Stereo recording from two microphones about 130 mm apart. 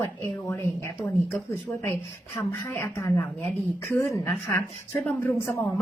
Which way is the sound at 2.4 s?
20° left (ahead or behind).